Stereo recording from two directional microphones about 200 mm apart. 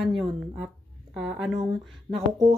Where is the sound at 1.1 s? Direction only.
Centre (ahead or behind).